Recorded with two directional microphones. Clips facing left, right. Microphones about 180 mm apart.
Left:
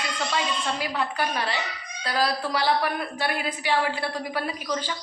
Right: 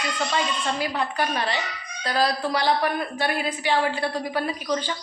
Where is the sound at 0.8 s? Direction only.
5° left (ahead or behind).